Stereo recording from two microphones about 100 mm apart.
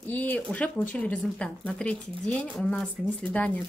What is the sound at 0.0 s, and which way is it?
Speech, 15° left (ahead or behind).